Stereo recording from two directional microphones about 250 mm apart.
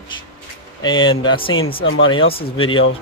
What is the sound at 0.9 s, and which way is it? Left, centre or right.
Speech, left.